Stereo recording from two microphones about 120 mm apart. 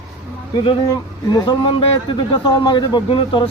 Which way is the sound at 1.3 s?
45° left (ahead or behind).